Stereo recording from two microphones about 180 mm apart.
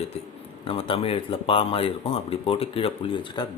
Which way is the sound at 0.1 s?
35° left (ahead or behind).